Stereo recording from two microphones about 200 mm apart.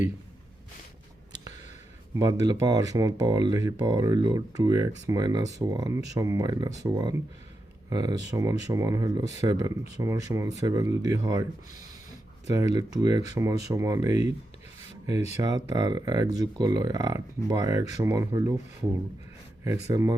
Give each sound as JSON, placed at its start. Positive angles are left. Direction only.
{"t": 2.1, "sound": "speech", "side_deg": -15}
{"t": 13.0, "sound": "speech", "side_deg": -20}
{"t": 15.4, "sound": "speech", "side_deg": -20}
{"t": 19.9, "sound": "speech", "side_deg": -20}